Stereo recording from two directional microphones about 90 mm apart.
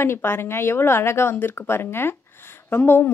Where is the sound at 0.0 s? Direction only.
25° left (ahead or behind).